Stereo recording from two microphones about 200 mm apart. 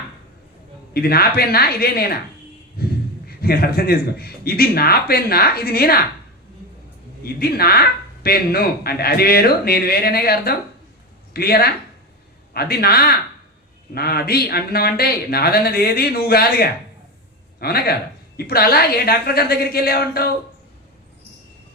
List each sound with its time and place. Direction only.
0.9 s speech: 50° left (ahead or behind)
2.8 s a sound: 50° left (ahead or behind)
3.2 s speech: 50° left (ahead or behind)
7.3 s speech: 50° left (ahead or behind)